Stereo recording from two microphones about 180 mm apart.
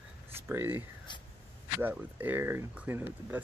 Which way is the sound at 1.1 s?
25° left (ahead or behind).